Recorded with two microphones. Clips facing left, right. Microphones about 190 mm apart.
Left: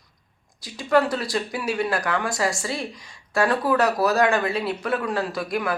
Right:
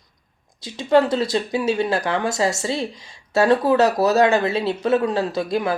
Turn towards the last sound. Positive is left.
turn(degrees=-25)  # may be behind; listen again after turning